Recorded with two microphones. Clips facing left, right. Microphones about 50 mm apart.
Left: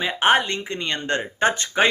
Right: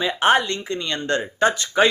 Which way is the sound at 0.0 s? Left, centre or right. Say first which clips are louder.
Right 1 dB; left.